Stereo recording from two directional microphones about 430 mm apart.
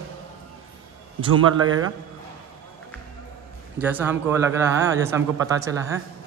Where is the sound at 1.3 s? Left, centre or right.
Right.